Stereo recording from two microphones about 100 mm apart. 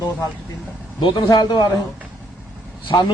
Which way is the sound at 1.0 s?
45° left (ahead or behind).